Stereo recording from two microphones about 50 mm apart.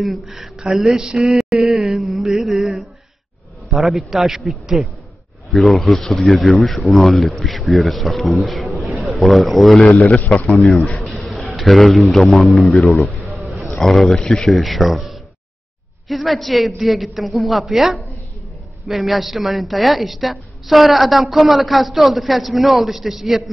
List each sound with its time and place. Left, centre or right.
0.0 s a woman's voice: centre
1.0 s mantra: centre
2.5 s a sound: centre
3.7 s a man's voice: centre
9.8 s a man's voice: left
11.1 s a sound: centre
11.5 s a man's voice: centre
12.7 s a man's voice: left
13.7 s a woman's voice: centre
14.5 s a woman's voice: centre